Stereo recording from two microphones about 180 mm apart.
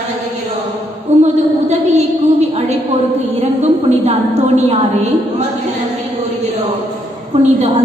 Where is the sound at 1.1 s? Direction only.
40° right (ahead or behind).